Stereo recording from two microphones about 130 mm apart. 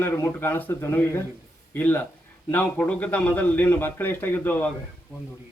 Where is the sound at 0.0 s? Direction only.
15° left (ahead or behind).